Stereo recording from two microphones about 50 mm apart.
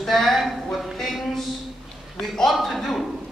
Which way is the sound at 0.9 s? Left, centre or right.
Centre.